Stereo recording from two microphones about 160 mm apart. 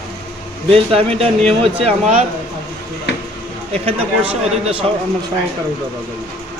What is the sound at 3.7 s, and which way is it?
Speech, 35° right (ahead or behind).